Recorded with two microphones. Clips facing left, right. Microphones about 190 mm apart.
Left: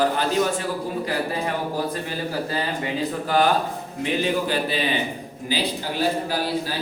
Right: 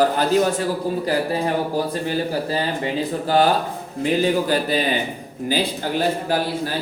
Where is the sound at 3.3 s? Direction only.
35° right (ahead or behind); by 5.7 s 50° right (ahead or behind).